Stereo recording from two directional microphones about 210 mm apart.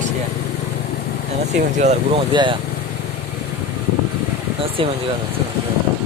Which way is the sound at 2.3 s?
20° right (ahead or behind).